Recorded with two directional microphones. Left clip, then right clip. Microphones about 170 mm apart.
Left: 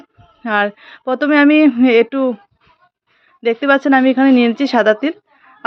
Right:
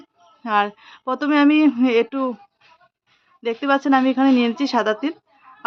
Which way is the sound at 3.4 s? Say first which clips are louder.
Left 6 dB; 25° left (ahead or behind).